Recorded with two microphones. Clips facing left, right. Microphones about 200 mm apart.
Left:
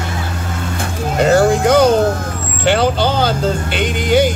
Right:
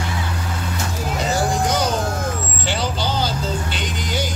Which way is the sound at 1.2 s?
60° left (ahead or behind).